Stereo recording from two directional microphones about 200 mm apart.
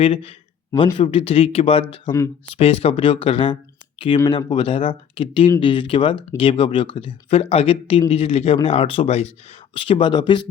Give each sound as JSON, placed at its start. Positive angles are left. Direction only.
{"t": 0.0, "sound": "speech", "side_deg": 30}